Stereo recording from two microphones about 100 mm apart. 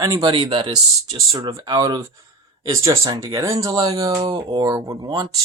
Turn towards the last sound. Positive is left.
turn(degrees=-45)  # may be behind; listen again after turning